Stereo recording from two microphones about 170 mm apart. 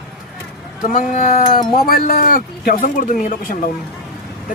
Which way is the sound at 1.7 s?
60° left (ahead or behind).